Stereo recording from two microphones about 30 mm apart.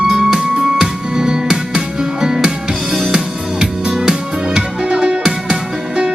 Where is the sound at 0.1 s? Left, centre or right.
Right.